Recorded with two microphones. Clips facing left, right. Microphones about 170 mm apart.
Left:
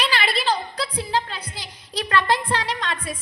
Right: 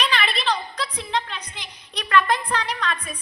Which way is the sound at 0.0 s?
30° left (ahead or behind).